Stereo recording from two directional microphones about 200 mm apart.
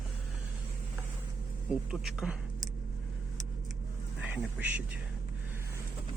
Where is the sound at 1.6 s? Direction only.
5° right (ahead or behind).